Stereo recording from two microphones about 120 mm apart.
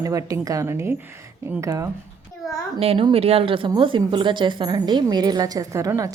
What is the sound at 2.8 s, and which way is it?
A woman's voice, 55° right (ahead or behind).